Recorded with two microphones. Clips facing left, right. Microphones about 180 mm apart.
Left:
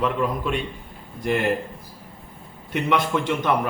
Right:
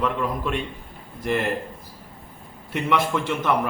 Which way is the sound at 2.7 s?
Centre (ahead or behind).